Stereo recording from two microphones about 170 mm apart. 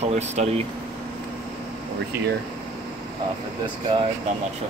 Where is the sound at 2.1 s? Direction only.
15° right (ahead or behind).